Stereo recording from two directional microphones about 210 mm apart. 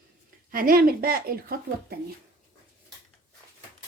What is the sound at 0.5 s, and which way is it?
A woman's voice, 45° right (ahead or behind).